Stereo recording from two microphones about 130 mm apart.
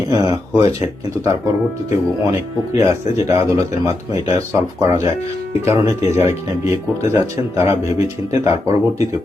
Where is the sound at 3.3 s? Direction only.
25° right (ahead or behind).